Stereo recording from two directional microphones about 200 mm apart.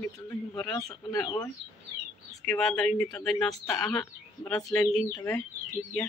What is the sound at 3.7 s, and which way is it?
Speech, 15° left (ahead or behind).